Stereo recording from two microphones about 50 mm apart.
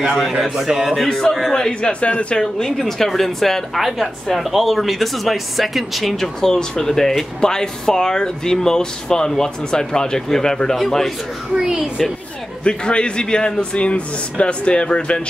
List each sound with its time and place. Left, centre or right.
0.0 s a man's voice: centre
1.0 s a man's voice: centre
1.6 s a man's voice: centre
2.3 s a woman's voice: centre
11.5 s speech: centre
12.6 s a man's voice: centre